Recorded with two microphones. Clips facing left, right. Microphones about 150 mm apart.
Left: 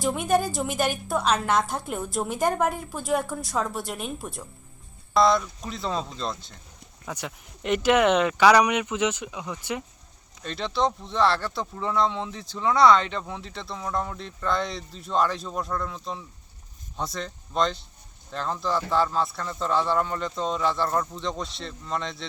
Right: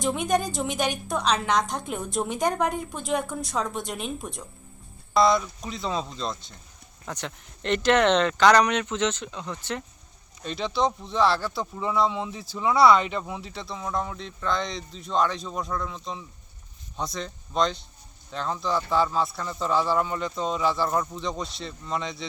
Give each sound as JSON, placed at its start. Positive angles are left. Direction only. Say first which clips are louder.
{"t": 0.0, "sound": "speech", "louder": "left 1 dB", "side_deg": 5}
{"t": 10.4, "sound": "speech", "louder": "even", "side_deg": 0}